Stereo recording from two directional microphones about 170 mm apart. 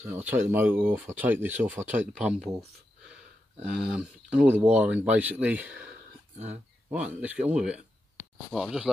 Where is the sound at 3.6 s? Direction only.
5° right (ahead or behind).